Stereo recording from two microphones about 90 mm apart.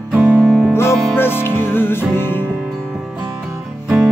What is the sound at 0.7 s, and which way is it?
Music, 25° left (ahead or behind).